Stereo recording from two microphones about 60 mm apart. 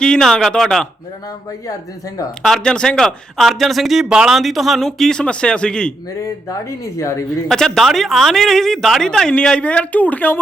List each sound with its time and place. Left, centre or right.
0.0 s speech: centre
2.6 s speech: centre
4.1 s speech: centre
4.4 s speech: centre
6.7 s a woman's voice: left
7.4 s speech: centre; by 10.4 s left